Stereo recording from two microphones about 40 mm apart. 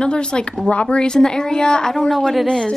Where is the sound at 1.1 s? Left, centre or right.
Centre.